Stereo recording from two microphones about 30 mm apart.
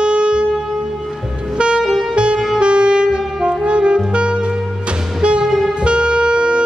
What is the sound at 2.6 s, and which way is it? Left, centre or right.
Saxophone, right.